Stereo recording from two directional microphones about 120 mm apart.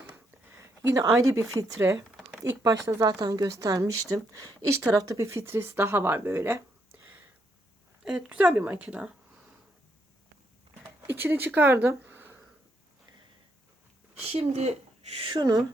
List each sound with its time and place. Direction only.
0.1 s speech: 20° right (ahead or behind)
8.0 s a woman's voice: 10° right (ahead or behind)
11.0 s speech: 20° right (ahead or behind)
14.3 s speech: 65° right (ahead or behind)
15.3 s speech: 35° right (ahead or behind)